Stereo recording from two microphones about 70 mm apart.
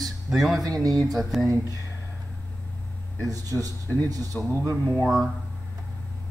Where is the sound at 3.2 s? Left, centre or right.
Right.